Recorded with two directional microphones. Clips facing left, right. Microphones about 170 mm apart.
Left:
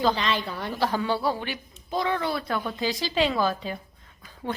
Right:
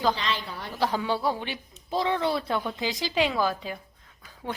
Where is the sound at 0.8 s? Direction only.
15° right (ahead or behind).